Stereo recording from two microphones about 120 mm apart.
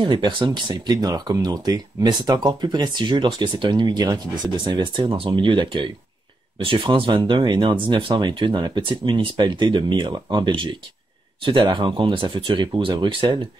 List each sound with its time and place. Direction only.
0.0 s speech: 45° right (ahead or behind)